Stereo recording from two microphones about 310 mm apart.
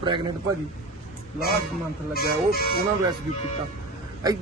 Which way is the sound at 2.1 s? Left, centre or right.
Left.